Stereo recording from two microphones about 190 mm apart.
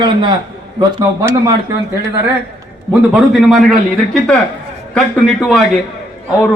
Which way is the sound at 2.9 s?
Centre (ahead or behind).